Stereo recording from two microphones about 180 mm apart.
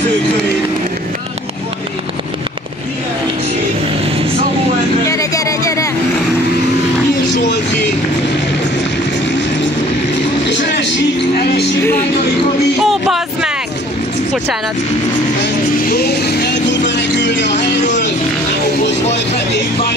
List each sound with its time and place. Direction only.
5.1 s music: 20° left (ahead or behind)
10.4 s vehicle: 75° left (ahead or behind)
12.8 s music: centre (ahead or behind)
15.4 s vehicle: 60° left (ahead or behind); by 18.1 s 80° left